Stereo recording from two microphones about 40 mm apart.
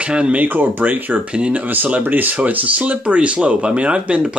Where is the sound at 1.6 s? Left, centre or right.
Right.